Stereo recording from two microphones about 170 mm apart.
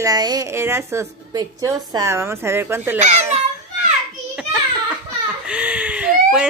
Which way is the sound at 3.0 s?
40° right (ahead or behind).